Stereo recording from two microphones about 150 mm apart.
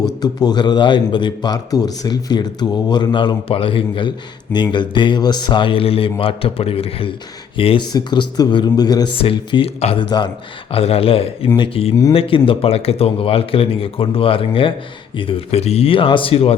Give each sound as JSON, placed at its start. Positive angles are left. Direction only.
{"t": 0.2, "sound": "a man's voice", "side_deg": 25}